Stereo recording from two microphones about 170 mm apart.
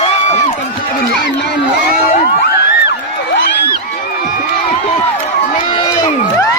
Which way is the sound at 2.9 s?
65° left (ahead or behind).